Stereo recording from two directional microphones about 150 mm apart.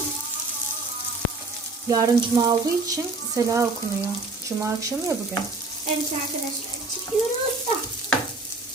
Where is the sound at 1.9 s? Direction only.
25° right (ahead or behind).